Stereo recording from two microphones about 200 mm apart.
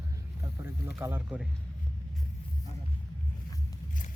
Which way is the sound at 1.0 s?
10° right (ahead or behind).